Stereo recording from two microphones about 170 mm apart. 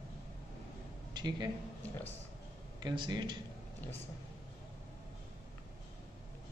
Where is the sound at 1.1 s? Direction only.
25° right (ahead or behind).